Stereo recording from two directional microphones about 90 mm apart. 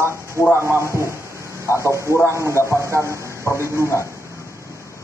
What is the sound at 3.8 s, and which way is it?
Speech, 35° left (ahead or behind).